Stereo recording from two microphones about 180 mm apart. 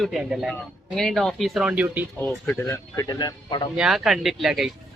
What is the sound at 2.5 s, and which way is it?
Speech, 15° left (ahead or behind).